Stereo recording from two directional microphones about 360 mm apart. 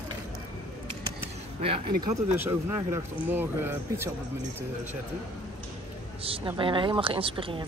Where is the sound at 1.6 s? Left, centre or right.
Centre.